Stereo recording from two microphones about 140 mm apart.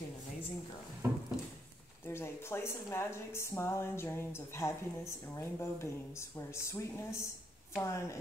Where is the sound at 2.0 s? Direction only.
20° left (ahead or behind).